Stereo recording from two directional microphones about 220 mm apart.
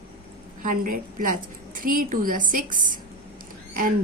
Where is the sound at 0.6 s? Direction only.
40° right (ahead or behind).